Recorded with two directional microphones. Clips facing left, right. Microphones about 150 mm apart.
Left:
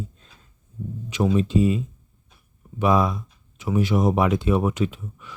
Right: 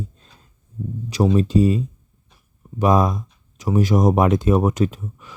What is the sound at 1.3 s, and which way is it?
Speech, 40° right (ahead or behind).